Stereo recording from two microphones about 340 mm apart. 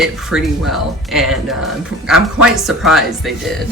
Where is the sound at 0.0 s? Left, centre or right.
Centre.